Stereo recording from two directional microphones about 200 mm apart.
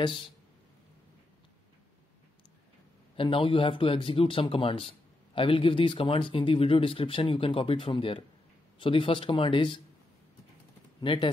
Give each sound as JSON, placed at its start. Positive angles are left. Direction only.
{"t": 3.2, "sound": "speech", "side_deg": 25}
{"t": 11.0, "sound": "speech", "side_deg": 25}